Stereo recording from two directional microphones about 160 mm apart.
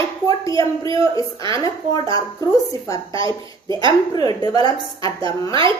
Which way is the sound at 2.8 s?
20° left (ahead or behind).